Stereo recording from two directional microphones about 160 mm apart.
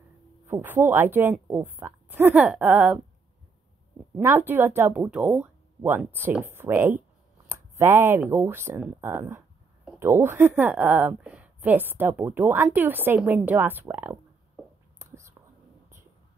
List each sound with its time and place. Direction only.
0.5 s a woman's voice: 15° right (ahead or behind)
4.2 s a woman's voice: 15° right (ahead or behind)
15.0 s whispering: 15° right (ahead or behind)